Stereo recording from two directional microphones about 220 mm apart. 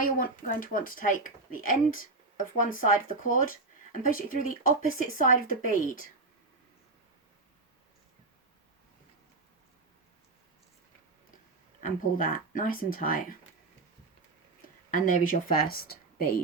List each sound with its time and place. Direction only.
0.0 s speech: 40° left (ahead or behind)
11.8 s speech: 40° left (ahead or behind)
14.8 s speech: 35° left (ahead or behind)